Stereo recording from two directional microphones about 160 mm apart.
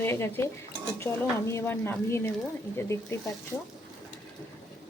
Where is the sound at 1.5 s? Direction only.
15° left (ahead or behind).